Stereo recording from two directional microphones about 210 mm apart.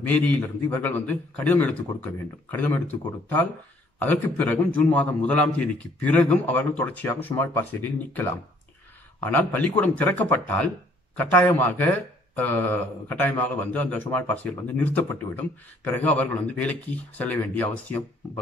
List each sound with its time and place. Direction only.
0.0 s speech: 10° left (ahead or behind)